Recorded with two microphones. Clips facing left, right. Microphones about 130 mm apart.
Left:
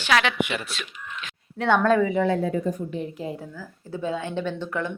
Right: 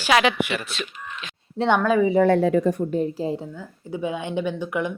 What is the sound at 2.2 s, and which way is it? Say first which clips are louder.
Speech: right 6 dB; 75° right (ahead or behind).